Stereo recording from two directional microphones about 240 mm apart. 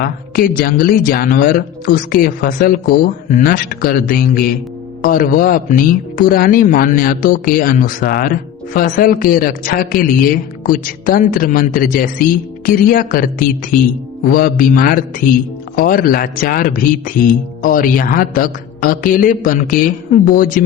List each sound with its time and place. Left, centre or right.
0.0 s speech: left